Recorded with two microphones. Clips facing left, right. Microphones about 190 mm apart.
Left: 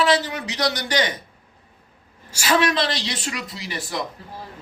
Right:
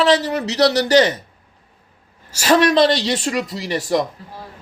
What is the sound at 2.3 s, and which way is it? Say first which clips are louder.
Speech: right 7 dB; 40° right (ahead or behind).